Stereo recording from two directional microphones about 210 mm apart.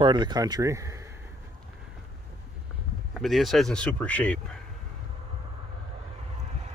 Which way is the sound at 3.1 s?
Centre (ahead or behind).